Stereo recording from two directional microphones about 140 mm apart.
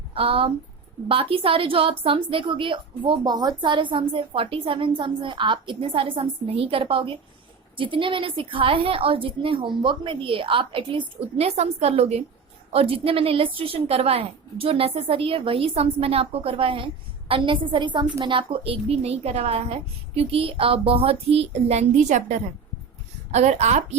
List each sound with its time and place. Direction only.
0.1 s a woman's voice: 40° right (ahead or behind)
11.3 s a woman's voice: 50° right (ahead or behind)